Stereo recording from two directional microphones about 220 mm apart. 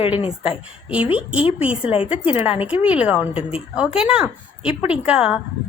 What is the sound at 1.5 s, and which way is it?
A woman's voice, 5° right (ahead or behind).